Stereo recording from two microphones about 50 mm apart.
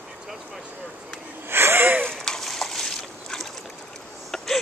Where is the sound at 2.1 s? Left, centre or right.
Centre.